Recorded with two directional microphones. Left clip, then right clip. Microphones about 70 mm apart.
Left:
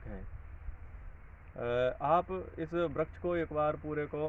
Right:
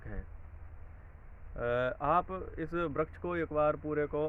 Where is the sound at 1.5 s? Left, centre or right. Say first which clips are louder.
Even; right.